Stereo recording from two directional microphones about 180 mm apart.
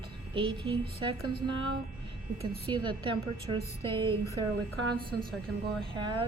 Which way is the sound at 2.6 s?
25° right (ahead or behind).